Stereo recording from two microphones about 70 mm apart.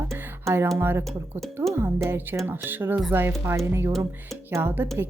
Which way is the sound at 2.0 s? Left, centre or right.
Right.